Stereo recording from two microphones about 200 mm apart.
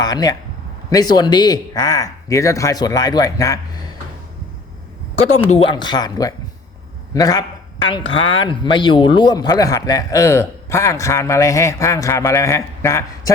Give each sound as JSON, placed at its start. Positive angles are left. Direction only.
{"t": 0.0, "sound": "speech", "side_deg": 20}
{"t": 5.4, "sound": "speech", "side_deg": 30}